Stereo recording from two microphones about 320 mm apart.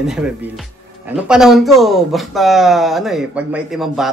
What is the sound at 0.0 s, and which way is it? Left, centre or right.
Speech, centre.